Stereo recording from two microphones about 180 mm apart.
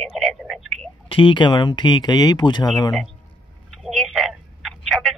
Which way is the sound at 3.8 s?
Centre (ahead or behind).